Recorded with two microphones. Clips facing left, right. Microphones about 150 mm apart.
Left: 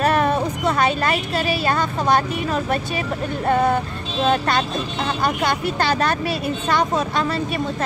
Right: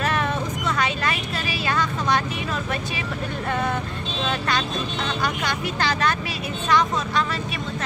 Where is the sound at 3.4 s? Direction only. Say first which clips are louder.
Left 8 dB; 40° left (ahead or behind).